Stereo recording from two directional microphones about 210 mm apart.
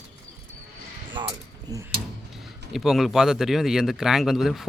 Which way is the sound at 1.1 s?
20° right (ahead or behind).